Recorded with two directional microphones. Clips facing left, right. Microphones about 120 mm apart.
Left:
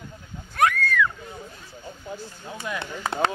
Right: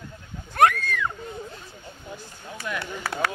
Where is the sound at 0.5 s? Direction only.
55° right (ahead or behind).